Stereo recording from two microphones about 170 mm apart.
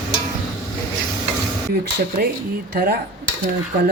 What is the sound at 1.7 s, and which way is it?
Speech, 65° right (ahead or behind).